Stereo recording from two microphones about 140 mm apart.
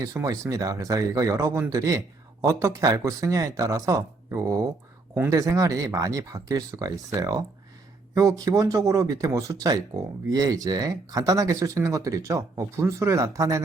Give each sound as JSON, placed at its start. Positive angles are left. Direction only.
{"t": 0.0, "sound": "speech", "side_deg": -25}